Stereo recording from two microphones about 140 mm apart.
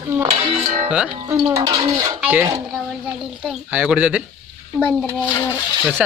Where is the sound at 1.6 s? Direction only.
30° right (ahead or behind).